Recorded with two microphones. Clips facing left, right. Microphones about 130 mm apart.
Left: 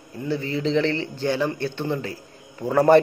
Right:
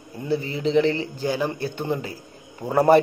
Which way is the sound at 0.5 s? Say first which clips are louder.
Right 2 dB; 10° right (ahead or behind).